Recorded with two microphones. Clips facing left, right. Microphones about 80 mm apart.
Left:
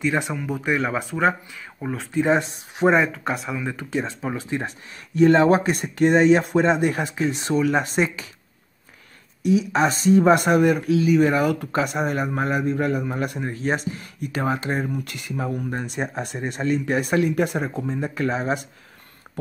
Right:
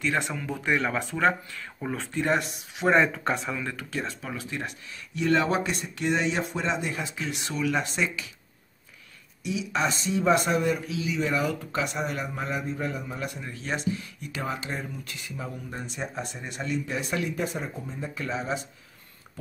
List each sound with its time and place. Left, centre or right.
0.0 s speech: centre
2.1 s speech: left
2.9 s speech: centre
3.7 s speech: left
7.2 s speech: left
9.4 s speech: left
13.5 s speech: left